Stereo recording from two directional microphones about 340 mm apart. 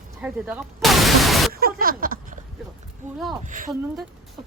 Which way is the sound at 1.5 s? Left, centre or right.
Right.